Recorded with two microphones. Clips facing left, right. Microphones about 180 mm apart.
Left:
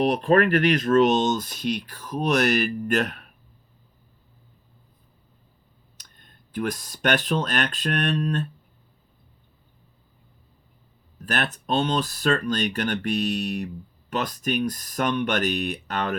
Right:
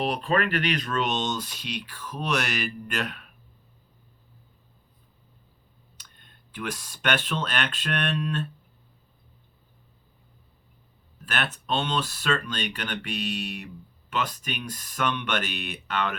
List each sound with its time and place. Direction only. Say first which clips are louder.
0.0 s speech: left 6 dB; 50° left (ahead or behind)
6.0 s speech: left 2 dB; 40° left (ahead or behind)
11.3 s speech: left 3 dB; 40° left (ahead or behind)